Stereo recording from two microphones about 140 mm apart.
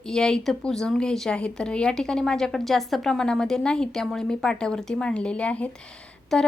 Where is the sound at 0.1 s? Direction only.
5° left (ahead or behind).